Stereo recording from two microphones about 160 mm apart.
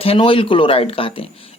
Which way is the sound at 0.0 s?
35° left (ahead or behind).